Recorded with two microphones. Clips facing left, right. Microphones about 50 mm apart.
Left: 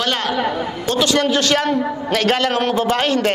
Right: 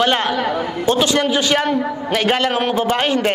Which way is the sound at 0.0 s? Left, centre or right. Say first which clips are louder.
Right 3 dB; right.